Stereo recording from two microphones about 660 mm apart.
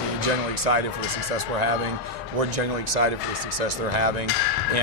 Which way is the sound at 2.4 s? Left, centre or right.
Right.